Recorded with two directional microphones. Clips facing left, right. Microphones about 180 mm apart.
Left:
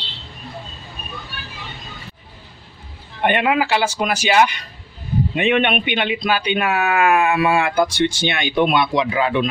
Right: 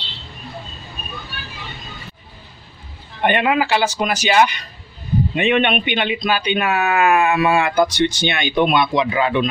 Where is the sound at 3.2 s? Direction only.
5° left (ahead or behind).